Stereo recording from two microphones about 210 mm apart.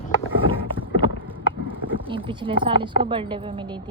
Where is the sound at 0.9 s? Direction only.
25° right (ahead or behind).